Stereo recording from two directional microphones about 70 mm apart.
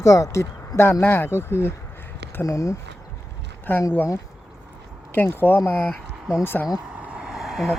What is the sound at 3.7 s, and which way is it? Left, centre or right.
Speech, left.